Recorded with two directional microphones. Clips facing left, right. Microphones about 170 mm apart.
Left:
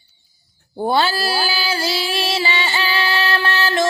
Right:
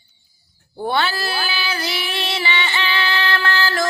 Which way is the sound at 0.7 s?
30° left (ahead or behind).